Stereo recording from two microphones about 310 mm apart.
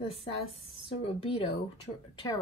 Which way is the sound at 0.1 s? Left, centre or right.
Centre.